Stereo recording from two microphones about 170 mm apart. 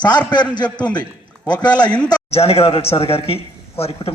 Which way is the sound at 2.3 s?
35° left (ahead or behind).